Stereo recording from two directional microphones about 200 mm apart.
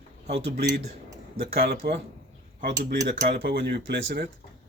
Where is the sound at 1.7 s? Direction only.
50° right (ahead or behind).